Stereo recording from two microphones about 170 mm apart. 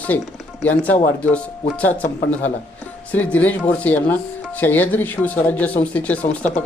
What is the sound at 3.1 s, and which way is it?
Speech, 10° left (ahead or behind).